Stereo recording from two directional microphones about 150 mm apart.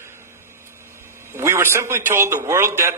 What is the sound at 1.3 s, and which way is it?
A man's voice, 20° right (ahead or behind).